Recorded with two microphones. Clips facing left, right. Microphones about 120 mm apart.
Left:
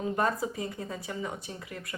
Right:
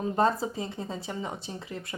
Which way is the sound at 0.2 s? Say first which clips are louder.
Right 6 dB; 30° right (ahead or behind).